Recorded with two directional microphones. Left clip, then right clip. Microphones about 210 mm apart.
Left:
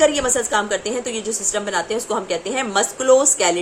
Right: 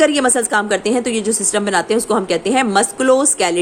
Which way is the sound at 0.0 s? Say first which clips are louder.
Right 3 dB; 45° right (ahead or behind).